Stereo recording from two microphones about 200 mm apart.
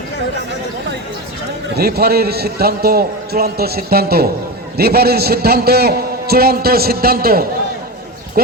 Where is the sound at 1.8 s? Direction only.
50° right (ahead or behind).